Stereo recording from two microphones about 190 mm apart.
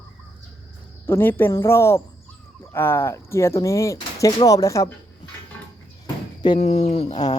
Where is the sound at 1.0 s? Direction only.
10° left (ahead or behind).